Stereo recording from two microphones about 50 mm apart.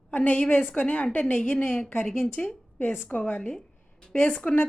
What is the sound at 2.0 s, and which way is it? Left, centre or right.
Speech, centre.